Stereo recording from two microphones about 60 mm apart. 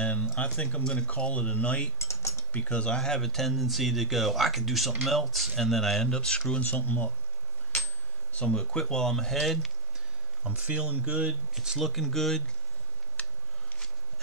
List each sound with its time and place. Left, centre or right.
0.0 s a sound: left
0.4 s speech: left
2.0 s cutlery: left
2.5 s speech: left
6.5 s speech: left
8.3 s speech: left; by 9.7 s centre
10.4 s speech: right
11.5 s speech: centre
11.9 s speech: centre
13.2 s a sound: left